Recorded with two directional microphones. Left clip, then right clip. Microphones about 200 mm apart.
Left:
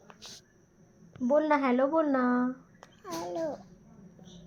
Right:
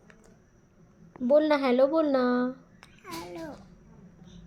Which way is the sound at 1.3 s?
40° right (ahead or behind).